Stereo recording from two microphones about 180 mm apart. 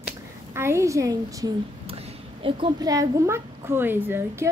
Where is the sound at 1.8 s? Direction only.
30° right (ahead or behind).